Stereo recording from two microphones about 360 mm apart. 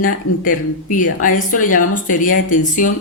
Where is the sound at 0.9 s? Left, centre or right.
Left.